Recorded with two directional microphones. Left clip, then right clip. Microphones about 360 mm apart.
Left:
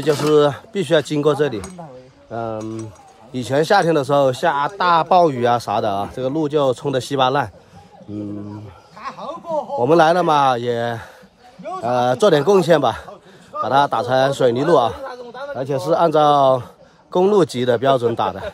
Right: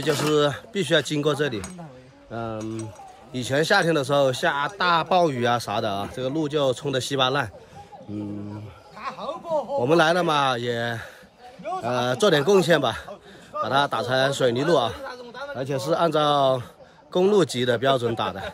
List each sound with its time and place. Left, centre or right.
0.0 s speech: centre
9.0 s a sound: centre
9.8 s speech: centre